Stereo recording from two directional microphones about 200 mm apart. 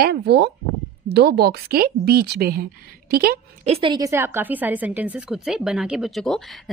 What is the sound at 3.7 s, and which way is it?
A woman's voice, 25° right (ahead or behind).